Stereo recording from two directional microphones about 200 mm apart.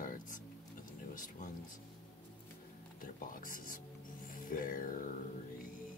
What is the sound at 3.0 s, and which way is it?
Music, 45° left (ahead or behind).